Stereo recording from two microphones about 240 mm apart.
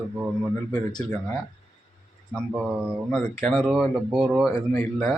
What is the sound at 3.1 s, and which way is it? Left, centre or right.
Speech, centre.